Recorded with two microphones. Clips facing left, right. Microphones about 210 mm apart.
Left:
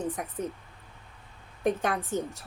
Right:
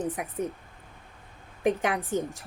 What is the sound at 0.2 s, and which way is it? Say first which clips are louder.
Speech: right 1 dB; 10° right (ahead or behind).